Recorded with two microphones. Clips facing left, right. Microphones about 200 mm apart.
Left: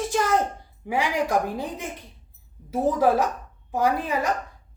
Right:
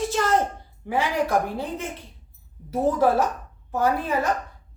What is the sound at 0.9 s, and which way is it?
A woman's voice, 15° left (ahead or behind).